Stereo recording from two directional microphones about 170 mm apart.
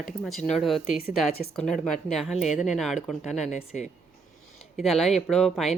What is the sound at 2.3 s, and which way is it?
Speech, 40° left (ahead or behind).